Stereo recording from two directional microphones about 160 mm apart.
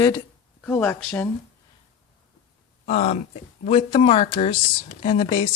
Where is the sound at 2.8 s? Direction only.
45° left (ahead or behind).